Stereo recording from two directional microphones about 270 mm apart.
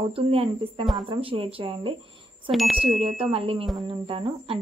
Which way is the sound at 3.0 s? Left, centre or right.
Right.